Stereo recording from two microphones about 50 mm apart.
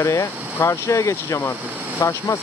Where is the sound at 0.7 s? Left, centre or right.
Left.